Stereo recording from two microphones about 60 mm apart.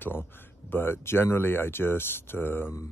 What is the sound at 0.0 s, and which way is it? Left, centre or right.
Speech, left.